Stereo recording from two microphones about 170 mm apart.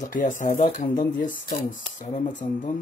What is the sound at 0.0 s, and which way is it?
Speech, 50° left (ahead or behind).